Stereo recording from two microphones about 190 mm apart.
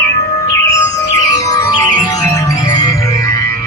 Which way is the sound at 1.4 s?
20° left (ahead or behind).